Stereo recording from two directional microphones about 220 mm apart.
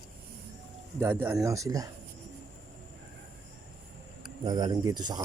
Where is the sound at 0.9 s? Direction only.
10° right (ahead or behind).